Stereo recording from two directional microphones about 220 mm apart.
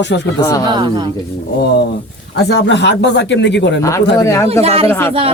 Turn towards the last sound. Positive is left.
turn(degrees=10)  # may be behind; listen again after turning